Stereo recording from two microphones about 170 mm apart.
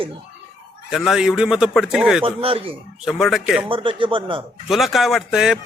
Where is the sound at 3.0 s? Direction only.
Centre (ahead or behind).